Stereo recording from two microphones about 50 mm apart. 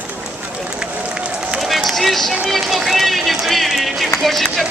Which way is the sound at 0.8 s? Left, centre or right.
Right.